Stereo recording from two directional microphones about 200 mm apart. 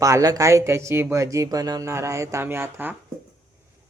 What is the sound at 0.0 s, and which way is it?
Speech, 15° right (ahead or behind).